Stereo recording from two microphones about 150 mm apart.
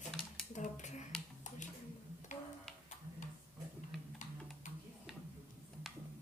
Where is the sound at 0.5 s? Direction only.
55° left (ahead or behind).